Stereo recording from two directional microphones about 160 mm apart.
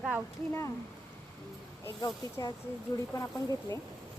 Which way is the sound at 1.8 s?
20° left (ahead or behind).